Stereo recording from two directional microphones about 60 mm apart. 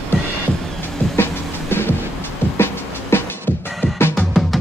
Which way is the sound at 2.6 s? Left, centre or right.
Left.